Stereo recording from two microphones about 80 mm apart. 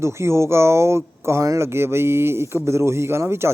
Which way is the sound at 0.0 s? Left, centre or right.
Right.